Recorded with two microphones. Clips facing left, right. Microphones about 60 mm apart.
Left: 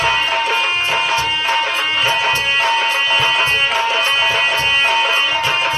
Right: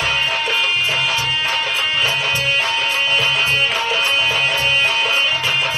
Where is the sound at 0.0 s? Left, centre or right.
Left.